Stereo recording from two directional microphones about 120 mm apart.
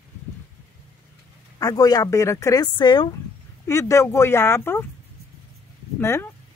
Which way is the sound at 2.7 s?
40° left (ahead or behind).